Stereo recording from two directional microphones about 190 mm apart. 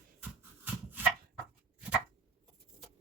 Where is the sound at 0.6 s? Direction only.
10° right (ahead or behind).